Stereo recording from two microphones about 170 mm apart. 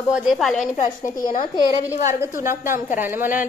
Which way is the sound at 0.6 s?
50° left (ahead or behind).